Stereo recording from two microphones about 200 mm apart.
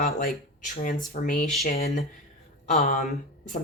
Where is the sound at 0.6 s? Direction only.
40° left (ahead or behind).